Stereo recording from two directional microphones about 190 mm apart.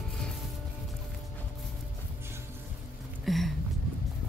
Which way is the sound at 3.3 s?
Centre (ahead or behind).